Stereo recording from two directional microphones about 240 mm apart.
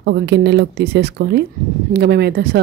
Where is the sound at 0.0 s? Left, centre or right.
Right.